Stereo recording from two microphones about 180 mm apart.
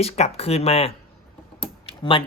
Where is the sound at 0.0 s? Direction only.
35° left (ahead or behind).